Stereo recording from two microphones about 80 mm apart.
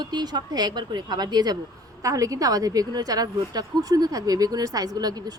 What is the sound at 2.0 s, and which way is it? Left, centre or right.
A woman's voice, right.